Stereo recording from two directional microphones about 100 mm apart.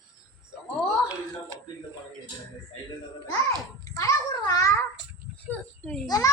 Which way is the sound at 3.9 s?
35° left (ahead or behind).